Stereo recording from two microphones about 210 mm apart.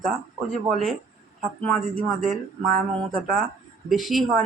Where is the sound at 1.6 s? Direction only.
5° left (ahead or behind).